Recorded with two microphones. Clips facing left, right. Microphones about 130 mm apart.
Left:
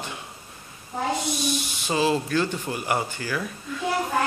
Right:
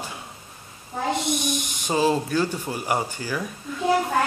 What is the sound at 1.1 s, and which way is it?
Speech, 60° right (ahead or behind).